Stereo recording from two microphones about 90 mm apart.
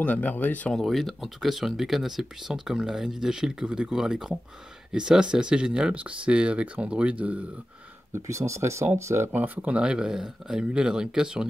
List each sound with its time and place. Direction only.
0.0 s speech: 20° left (ahead or behind)
0.7 s speech: centre (ahead or behind); by 7.4 s 15° right (ahead or behind)
8.1 s speech: 35° right (ahead or behind)
9.3 s speech: 20° right (ahead or behind)